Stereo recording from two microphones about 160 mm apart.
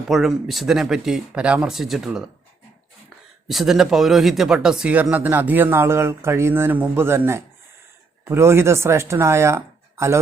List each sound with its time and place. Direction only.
0.1 s speech: centre (ahead or behind)
3.5 s speech: centre (ahead or behind); by 10.2 s 15° right (ahead or behind)